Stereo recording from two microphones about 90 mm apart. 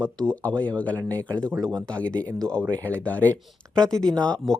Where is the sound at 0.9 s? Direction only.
40° right (ahead or behind).